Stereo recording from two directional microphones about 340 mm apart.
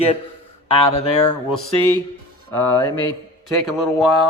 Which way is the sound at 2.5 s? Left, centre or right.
Centre.